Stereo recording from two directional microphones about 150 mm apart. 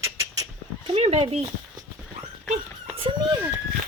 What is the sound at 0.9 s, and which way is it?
Speech, 40° right (ahead or behind).